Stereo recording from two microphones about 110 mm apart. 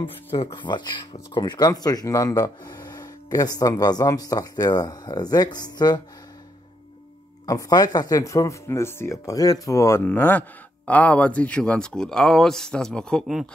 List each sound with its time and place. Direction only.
0.0 s speech: 55° left (ahead or behind); by 5.9 s 40° left (ahead or behind)
7.4 s speech: 35° left (ahead or behind)
10.0 s speech: 15° left (ahead or behind); by 13.5 s centre (ahead or behind)